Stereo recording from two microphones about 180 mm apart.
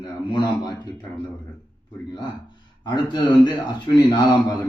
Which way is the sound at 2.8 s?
25° left (ahead or behind).